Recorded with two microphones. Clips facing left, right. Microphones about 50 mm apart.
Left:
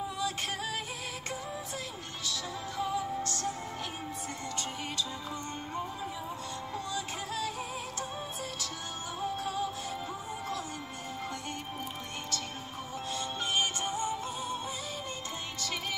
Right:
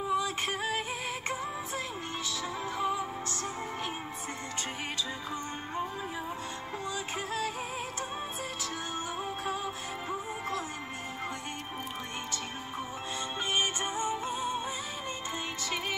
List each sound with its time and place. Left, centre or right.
0.1 s music: right
2.8 s music: right
6.9 s music: right
9.2 s music: right
13.6 s music: right